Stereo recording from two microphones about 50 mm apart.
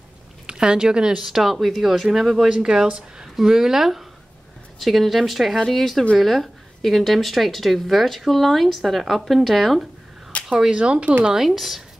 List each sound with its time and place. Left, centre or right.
0.5 s speech: centre
10.5 s speech: centre
11.3 s speech: centre